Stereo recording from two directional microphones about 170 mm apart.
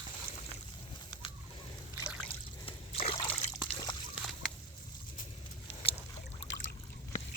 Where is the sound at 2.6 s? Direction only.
35° left (ahead or behind).